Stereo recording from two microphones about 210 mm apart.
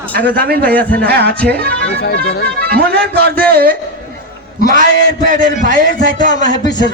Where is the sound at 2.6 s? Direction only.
50° right (ahead or behind).